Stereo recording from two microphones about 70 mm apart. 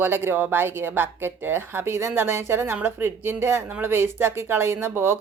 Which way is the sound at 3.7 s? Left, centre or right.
Right.